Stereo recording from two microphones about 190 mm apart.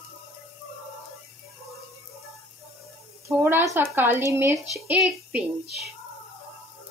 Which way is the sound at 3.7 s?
10° right (ahead or behind).